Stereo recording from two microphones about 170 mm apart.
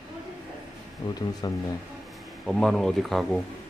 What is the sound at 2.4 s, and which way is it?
Speech, 5° left (ahead or behind).